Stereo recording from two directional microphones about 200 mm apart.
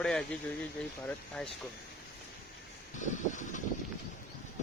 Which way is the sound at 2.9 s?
40° left (ahead or behind).